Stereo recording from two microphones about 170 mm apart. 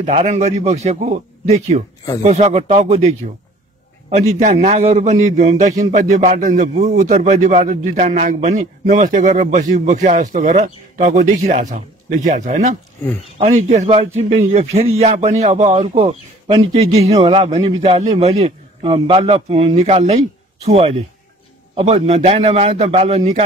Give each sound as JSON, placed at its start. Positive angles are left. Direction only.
{"t": 0.0, "sound": "a man's voice", "side_deg": -40}
{"t": 13.0, "sound": "speech", "side_deg": 15}
{"t": 13.4, "sound": "a man's voice", "side_deg": -45}